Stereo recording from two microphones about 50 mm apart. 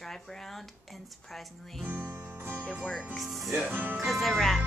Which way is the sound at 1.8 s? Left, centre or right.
Right.